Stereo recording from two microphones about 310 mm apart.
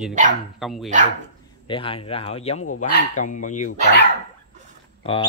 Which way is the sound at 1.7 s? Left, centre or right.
Centre.